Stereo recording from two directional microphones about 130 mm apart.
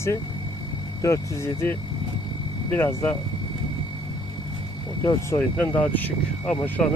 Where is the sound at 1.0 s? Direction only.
20° left (ahead or behind).